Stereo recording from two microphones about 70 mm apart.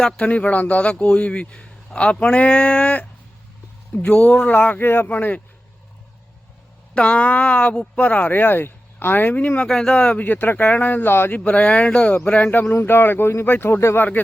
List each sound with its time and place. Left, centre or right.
0.0 s a man's voice: centre
6.9 s speech: centre
9.6 s speech: centre; by 11.3 s left
11.3 s speech: centre; by 14.0 s left